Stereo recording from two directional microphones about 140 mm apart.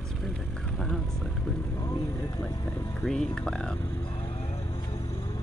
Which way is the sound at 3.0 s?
5° left (ahead or behind).